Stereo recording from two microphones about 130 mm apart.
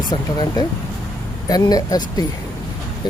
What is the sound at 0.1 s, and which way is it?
Speech, 30° left (ahead or behind).